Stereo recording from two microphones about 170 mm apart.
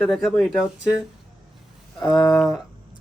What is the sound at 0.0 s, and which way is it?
Speech, centre (ahead or behind).